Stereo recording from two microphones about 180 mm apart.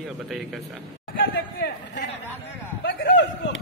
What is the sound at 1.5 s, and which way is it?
Speech, 70° left (ahead or behind).